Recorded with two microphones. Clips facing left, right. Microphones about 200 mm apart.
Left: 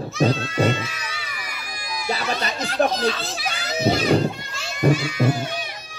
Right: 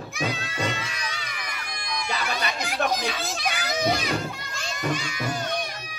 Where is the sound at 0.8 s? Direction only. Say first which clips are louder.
Left 2 dB; 5° left (ahead or behind).